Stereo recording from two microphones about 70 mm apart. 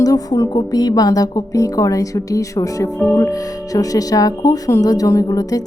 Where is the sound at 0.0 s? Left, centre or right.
Left.